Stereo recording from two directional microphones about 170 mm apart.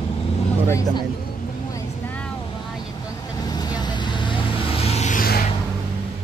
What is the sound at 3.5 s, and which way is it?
Vehicle, 25° left (ahead or behind).